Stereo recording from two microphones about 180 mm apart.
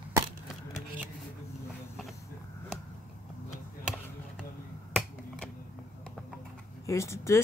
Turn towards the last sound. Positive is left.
turn(degrees=15)  # may be behind; listen again after turning